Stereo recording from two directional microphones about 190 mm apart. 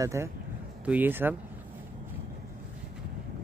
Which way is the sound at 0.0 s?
15° right (ahead or behind).